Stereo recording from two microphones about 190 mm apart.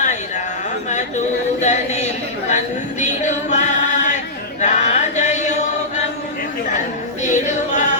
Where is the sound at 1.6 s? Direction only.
35° left (ahead or behind).